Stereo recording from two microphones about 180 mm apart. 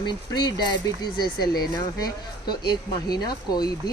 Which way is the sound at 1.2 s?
55° left (ahead or behind).